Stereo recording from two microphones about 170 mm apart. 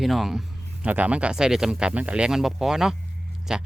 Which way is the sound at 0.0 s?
Centre (ahead or behind).